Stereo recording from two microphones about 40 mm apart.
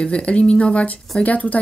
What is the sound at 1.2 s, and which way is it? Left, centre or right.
Speech, left.